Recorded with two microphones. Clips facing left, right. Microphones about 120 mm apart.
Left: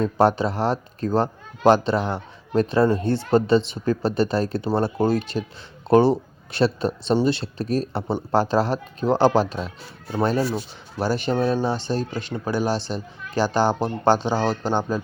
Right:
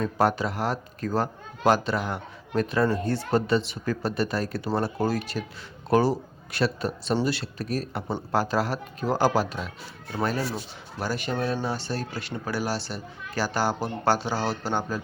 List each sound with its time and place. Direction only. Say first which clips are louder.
0.0 s a man's voice: left 5 dB; 30° left (ahead or behind)